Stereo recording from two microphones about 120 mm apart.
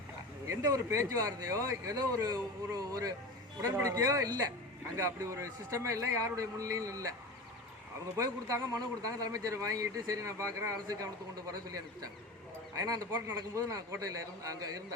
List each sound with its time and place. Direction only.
0.4 s speech: 25° right (ahead or behind)
8.1 s speech: 25° right (ahead or behind)
12.7 s speech: 30° right (ahead or behind)